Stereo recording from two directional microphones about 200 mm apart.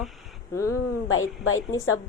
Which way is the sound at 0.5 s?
15° left (ahead or behind).